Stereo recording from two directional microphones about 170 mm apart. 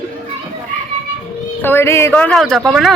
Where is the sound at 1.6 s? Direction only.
15° left (ahead or behind).